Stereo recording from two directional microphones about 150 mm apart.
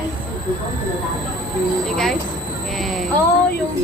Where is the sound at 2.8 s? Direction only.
Centre (ahead or behind).